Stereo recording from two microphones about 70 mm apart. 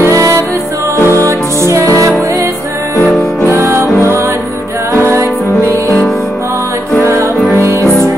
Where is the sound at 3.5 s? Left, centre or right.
Right.